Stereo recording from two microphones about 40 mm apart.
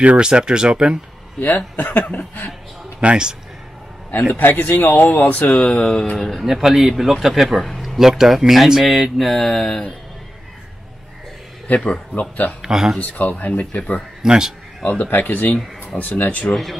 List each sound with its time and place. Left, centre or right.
0.2 s speech: right
1.8 s speech: left
3.0 s speech: right
4.3 s speech: left
5.1 s speech: left
5.6 s speech: centre
6.4 s speech: centre
7.6 s a sound: centre
8.0 s speech: centre
11.6 s speech: left
12.6 s speech: centre
13.0 s speech: left
14.2 s speech: centre
15.0 s speech: left